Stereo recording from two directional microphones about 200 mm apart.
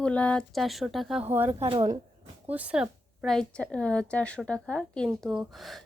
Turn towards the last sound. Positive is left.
turn(degrees=0)  # may be behind; listen again after turning